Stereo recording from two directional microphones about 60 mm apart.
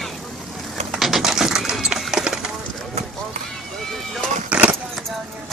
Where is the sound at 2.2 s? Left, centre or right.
Centre.